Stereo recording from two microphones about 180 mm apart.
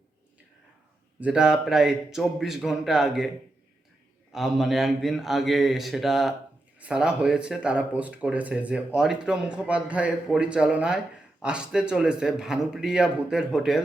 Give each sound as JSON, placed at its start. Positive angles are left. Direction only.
{"t": 1.2, "sound": "speech", "side_deg": -5}
{"t": 4.3, "sound": "speech", "side_deg": 0}